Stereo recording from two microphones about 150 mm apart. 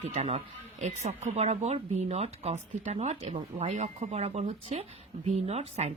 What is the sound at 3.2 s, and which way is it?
Speech, 35° right (ahead or behind).